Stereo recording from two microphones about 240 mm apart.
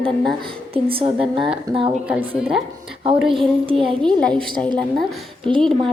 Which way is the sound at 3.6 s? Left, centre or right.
Right.